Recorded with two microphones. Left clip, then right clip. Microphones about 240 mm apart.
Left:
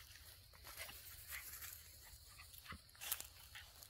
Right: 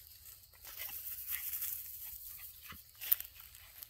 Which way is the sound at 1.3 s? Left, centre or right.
Right.